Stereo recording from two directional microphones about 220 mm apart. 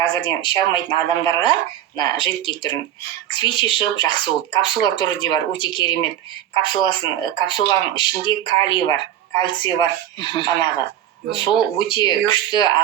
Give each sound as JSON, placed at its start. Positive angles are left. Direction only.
{"t": 0.0, "sound": "speech", "side_deg": 20}